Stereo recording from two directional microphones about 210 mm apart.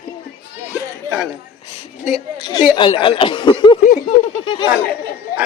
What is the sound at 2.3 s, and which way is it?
Speech, 20° left (ahead or behind).